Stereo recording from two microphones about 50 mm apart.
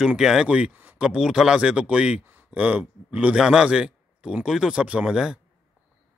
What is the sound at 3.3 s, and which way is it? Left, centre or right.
A man's voice, centre.